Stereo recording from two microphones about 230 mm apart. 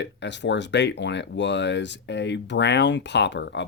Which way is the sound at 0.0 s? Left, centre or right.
Left.